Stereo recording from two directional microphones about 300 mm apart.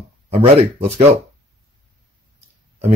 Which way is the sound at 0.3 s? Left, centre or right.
Centre.